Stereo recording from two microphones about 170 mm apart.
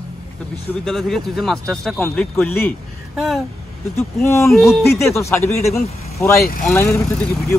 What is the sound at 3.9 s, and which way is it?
Speech, 15° left (ahead or behind).